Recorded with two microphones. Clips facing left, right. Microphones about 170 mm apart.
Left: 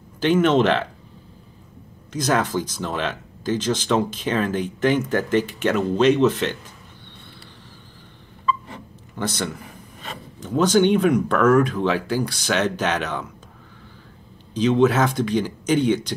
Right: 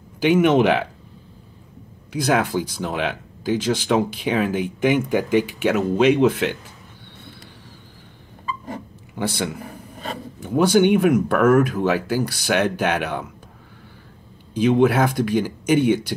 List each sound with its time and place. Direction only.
0.2 s speech: 10° right (ahead or behind)
2.1 s speech: 10° right (ahead or behind)
9.1 s a man's voice: 10° right (ahead or behind)
9.7 s a sound: 45° right (ahead or behind)
10.4 s speech: 10° right (ahead or behind)
14.5 s speech: 10° right (ahead or behind)